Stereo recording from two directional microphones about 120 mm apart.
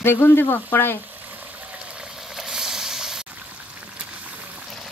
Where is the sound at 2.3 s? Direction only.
5° right (ahead or behind).